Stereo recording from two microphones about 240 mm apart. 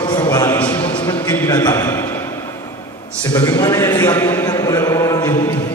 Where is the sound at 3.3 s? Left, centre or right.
Centre.